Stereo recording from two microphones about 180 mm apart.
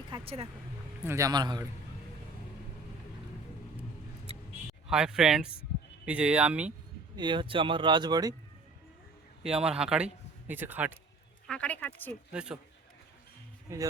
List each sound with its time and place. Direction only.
0.1 s speech: 35° right (ahead or behind)
1.0 s speech: 15° right (ahead or behind)
4.9 s speech: 5° right (ahead or behind)
7.2 s speech: 25° right (ahead or behind)
9.4 s speech: 5° right (ahead or behind)
11.4 s a sound: 5° left (ahead or behind)
12.3 s speech: 5° right (ahead or behind)